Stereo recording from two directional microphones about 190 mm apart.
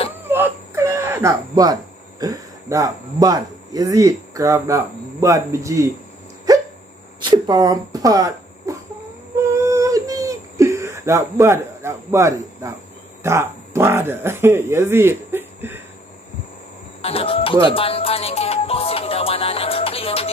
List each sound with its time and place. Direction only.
0.3 s speech: 10° right (ahead or behind)
7.2 s speech: 25° right (ahead or behind)
9.5 s a sound: 15° right (ahead or behind)
13.2 s speech: 15° right (ahead or behind)
17.0 s music: 30° left (ahead or behind)